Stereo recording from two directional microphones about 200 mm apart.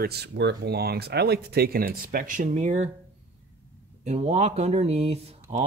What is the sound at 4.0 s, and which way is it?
Speech, 30° right (ahead or behind).